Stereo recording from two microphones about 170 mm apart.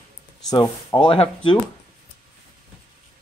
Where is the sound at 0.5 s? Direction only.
25° left (ahead or behind).